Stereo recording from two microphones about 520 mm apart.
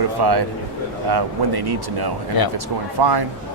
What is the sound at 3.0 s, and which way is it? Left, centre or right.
Speech, right.